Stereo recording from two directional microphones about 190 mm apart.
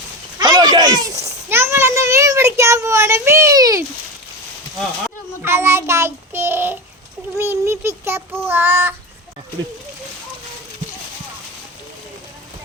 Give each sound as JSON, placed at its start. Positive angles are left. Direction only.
{"t": 0.3, "sound": "a child's voice", "side_deg": -20}
{"t": 5.0, "sound": "a child's voice", "side_deg": -10}